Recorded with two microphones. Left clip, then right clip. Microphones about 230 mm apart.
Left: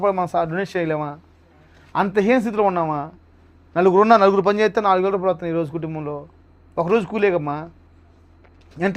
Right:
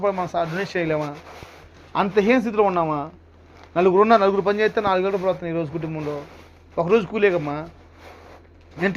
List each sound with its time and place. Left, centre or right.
0.0 s a man's voice: left